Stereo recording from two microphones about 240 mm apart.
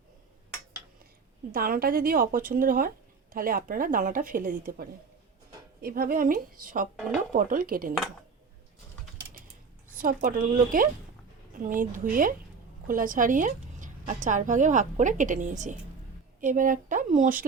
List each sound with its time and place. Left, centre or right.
1.5 s a woman's voice: right
10.0 s a woman's voice: right